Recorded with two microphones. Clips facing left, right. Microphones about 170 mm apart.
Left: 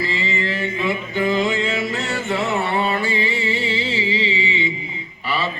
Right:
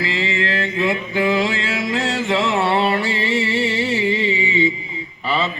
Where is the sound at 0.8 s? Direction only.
90° right; by 4.4 s 55° right (ahead or behind).